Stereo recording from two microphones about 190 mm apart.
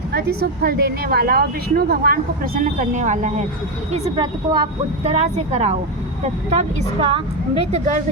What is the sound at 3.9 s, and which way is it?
Speech, 30° right (ahead or behind).